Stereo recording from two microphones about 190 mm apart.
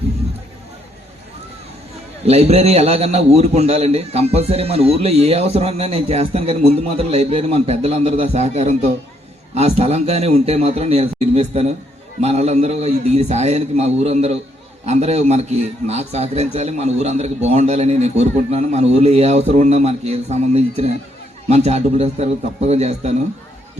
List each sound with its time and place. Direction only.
2.2 s a man's voice: 35° right (ahead or behind)